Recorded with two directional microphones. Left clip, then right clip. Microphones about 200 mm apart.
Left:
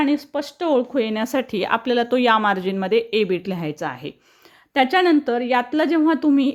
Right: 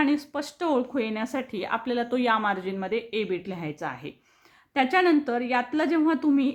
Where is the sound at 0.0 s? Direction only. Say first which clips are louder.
Left 4 dB; 20° left (ahead or behind).